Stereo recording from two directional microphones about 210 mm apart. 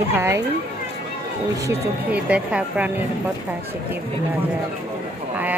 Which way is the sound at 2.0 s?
5° right (ahead or behind).